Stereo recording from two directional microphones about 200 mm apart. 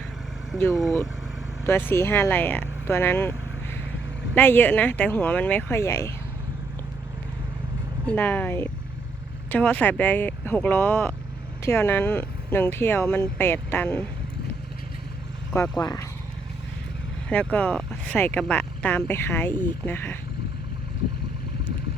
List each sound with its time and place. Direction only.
0.7 s speech: centre (ahead or behind)
1.9 s speech: 10° left (ahead or behind)
8.0 s speech: 10° left (ahead or behind)
15.5 s speech: 15° left (ahead or behind)
17.2 s speech: 10° left (ahead or behind)